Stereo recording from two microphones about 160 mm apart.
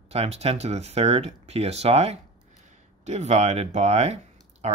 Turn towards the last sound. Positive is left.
turn(degrees=-45)  # may be behind; listen again after turning